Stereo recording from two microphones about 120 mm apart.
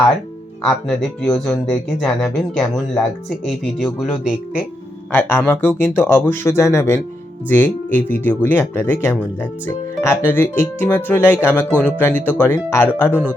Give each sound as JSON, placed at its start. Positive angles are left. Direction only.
{"t": 0.9, "sound": "speech", "side_deg": 5}
{"t": 5.1, "sound": "speech", "side_deg": 15}
{"t": 11.7, "sound": "speech", "side_deg": -15}
{"t": 12.0, "sound": "speech", "side_deg": 15}